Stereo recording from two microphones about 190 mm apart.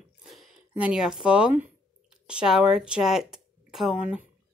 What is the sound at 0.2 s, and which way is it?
Speech, centre (ahead or behind).